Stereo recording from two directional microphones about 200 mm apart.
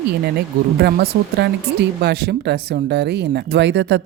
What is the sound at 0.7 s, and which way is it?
Speech, 55° right (ahead or behind).